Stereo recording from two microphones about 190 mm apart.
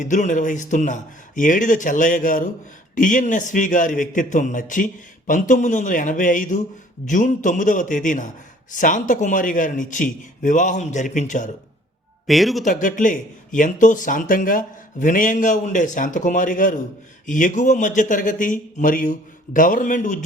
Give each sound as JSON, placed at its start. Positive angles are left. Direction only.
{"t": 0.0, "sound": "a man's voice", "side_deg": 40}
{"t": 12.3, "sound": "speech", "side_deg": 0}
{"t": 12.6, "sound": "speech", "side_deg": 45}